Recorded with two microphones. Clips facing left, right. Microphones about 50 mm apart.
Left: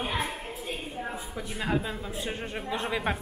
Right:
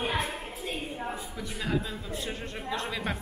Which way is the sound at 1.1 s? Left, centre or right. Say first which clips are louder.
Left 1 dB; centre.